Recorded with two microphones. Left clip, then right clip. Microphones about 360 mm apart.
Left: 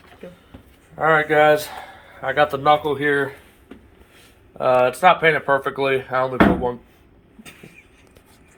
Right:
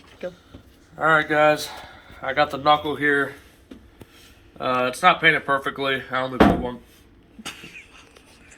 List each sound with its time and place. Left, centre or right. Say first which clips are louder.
0.9 s speech: left 2 dB; left
4.5 s speech: left 6 dB; left